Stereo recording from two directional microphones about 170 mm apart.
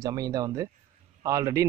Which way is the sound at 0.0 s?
20° right (ahead or behind).